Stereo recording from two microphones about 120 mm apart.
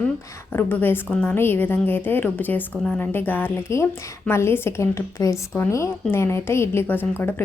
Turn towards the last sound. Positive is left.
turn(degrees=15)  # may be behind; listen again after turning